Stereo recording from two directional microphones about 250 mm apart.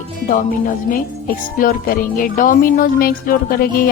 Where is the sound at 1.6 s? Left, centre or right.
Left.